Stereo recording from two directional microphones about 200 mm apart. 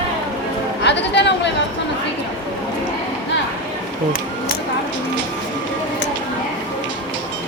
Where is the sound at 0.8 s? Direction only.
60° left (ahead or behind).